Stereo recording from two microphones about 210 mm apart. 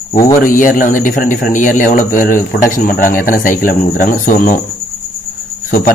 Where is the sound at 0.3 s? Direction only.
40° left (ahead or behind).